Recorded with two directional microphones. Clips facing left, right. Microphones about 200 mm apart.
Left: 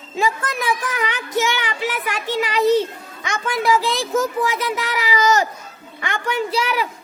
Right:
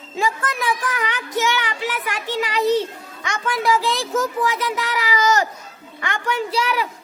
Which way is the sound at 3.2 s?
20° left (ahead or behind).